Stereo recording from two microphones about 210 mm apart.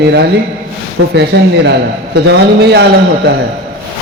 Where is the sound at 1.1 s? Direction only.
55° right (ahead or behind).